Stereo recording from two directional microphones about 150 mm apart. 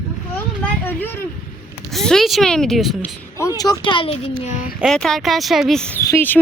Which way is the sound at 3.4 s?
25° left (ahead or behind).